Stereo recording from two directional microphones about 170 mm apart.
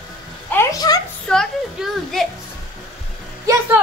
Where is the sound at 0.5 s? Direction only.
20° left (ahead or behind).